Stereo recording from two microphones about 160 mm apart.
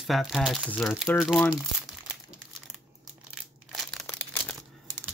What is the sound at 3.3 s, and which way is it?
Crumpling, centre (ahead or behind).